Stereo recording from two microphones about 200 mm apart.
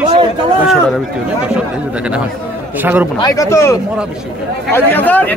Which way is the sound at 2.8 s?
10° right (ahead or behind).